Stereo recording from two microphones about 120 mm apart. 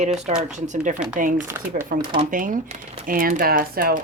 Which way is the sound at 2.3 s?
90° right.